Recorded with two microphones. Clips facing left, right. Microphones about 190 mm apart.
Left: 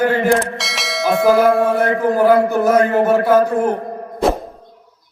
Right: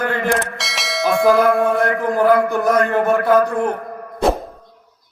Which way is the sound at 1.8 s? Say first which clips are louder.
Left 2 dB; 25° left (ahead or behind).